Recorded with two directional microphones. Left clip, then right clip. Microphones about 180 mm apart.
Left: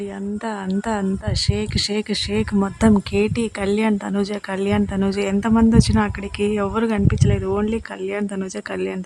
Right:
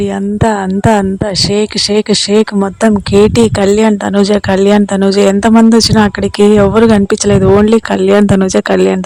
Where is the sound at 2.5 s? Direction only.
30° right (ahead or behind).